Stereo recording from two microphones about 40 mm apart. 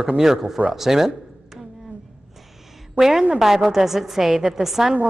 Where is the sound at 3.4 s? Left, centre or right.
Centre.